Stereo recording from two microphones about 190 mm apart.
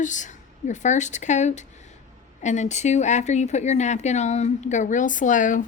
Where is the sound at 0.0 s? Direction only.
40° left (ahead or behind).